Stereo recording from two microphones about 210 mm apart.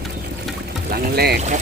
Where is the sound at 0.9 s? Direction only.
50° right (ahead or behind).